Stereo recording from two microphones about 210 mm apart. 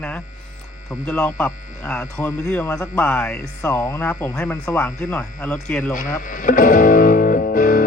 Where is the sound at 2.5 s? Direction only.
15° left (ahead or behind).